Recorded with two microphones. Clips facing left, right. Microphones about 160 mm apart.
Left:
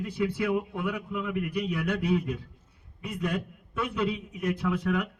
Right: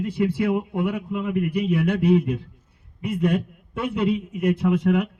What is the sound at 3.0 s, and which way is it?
Speech, 55° right (ahead or behind).